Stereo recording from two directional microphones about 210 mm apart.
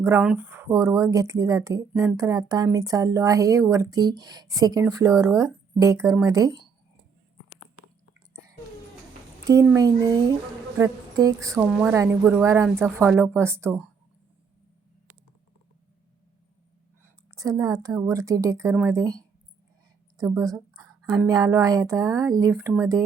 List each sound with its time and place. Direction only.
0.0 s speech: 10° right (ahead or behind)
1.9 s speech: 5° right (ahead or behind)
2.1 s speech: 15° right (ahead or behind)
9.5 s speech: 15° right (ahead or behind)
17.0 s a woman's voice: 15° right (ahead or behind)
20.3 s a sound: 15° right (ahead or behind)
21.1 s speech: 15° right (ahead or behind)